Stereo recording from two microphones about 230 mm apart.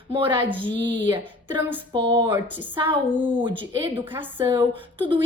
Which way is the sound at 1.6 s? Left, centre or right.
Centre.